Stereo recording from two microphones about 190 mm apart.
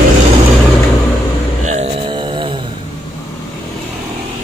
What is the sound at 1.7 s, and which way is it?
Mantra, 35° right (ahead or behind).